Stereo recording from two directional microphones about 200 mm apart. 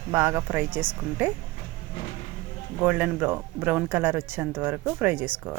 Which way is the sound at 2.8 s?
5° right (ahead or behind).